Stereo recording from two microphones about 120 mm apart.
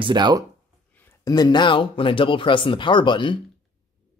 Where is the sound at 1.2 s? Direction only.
35° left (ahead or behind).